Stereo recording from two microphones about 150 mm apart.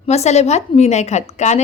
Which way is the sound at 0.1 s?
45° left (ahead or behind).